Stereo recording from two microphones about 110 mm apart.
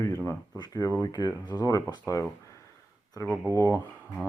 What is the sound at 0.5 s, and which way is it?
Speech, 35° left (ahead or behind).